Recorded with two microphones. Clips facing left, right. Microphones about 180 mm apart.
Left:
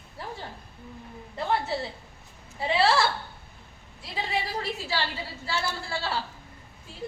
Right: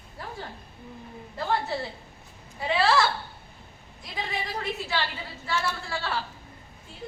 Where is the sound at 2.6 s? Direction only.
30° left (ahead or behind).